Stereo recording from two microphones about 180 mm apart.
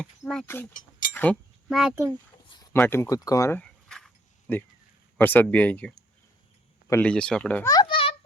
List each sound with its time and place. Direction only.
0.3 s speech: 10° left (ahead or behind)
0.7 s mechanisms: 50° left (ahead or behind)
1.1 s a sound: 10° left (ahead or behind)
1.8 s speech: 5° right (ahead or behind)
2.5 s speech: 20° left (ahead or behind)
3.6 s keys jangling: 5° left (ahead or behind)
5.1 s speech: 10° left (ahead or behind)
7.7 s a sound: 25° left (ahead or behind)